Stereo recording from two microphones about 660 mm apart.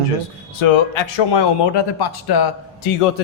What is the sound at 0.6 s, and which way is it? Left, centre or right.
Speech, left.